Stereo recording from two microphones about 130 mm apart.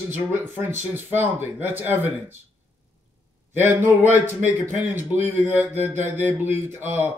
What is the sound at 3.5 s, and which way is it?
Speech, 15° right (ahead or behind).